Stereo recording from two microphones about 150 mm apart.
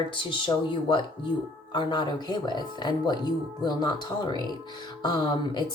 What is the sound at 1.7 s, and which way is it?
Speech, 30° left (ahead or behind).